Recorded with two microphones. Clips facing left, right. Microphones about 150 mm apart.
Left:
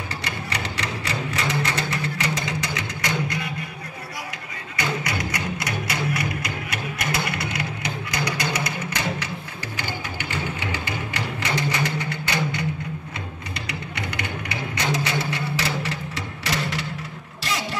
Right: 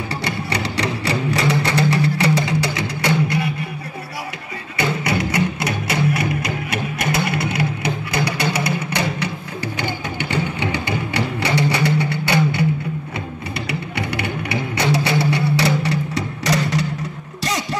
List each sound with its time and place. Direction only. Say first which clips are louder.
0.2 s music: right 6 dB; 35° right (ahead or behind)
4.7 s music: right 6 dB; 25° right (ahead or behind)
13.7 s music: right 6 dB; 30° right (ahead or behind)